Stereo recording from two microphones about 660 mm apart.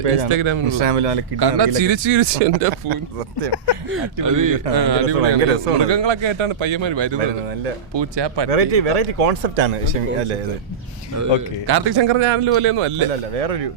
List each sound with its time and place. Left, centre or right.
0.0 s a man's voice: right
0.3 s a man's voice: right
0.8 s a man's voice: right
1.4 s a man's voice: right
3.8 s speech: right
5.0 s speech: right
5.7 s speech: right
7.2 s speech: right
7.9 s speech: right
8.4 s speech: right
11.1 s a man's voice: right
13.1 s a man's voice: right